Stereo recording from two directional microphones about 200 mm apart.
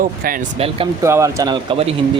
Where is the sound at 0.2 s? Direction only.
45° right (ahead or behind).